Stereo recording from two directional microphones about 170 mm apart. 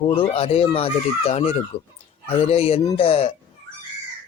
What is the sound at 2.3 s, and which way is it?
Speech, 35° left (ahead or behind).